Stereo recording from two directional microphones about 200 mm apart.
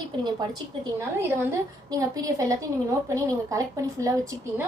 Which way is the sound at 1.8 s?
15° right (ahead or behind).